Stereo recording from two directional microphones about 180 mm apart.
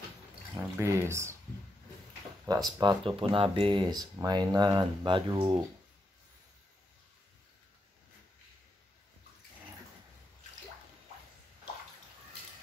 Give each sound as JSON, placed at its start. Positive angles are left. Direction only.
{"t": 0.6, "sound": "speech", "side_deg": -15}
{"t": 2.4, "sound": "speech", "side_deg": -20}